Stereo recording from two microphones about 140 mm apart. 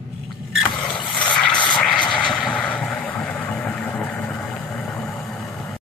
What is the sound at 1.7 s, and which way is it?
Vehicle, 5° left (ahead or behind).